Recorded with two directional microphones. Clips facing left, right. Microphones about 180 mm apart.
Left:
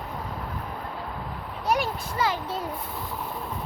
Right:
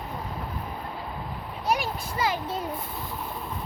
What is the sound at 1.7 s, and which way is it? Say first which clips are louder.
Speech: left 1 dB; 15° right (ahead or behind).